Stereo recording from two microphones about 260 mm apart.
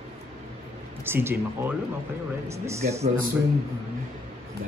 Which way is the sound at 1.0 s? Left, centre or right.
Centre.